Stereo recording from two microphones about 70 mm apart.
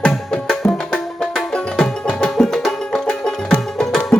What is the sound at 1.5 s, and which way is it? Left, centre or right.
Music, centre.